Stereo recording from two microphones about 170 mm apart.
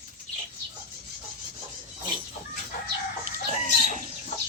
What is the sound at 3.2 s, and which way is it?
Chicken, 50° right (ahead or behind).